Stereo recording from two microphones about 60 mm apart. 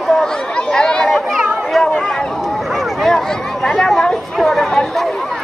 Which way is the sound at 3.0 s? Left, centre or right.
Centre.